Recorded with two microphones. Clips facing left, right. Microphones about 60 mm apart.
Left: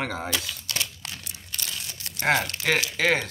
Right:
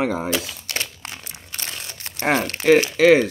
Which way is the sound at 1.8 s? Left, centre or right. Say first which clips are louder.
Right 3 dB; right.